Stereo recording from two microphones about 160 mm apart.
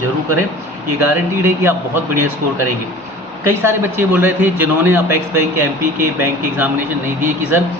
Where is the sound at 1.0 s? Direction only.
15° right (ahead or behind).